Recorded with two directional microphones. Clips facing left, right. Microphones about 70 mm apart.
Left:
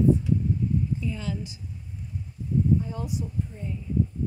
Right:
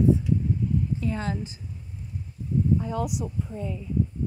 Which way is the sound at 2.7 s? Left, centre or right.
Right.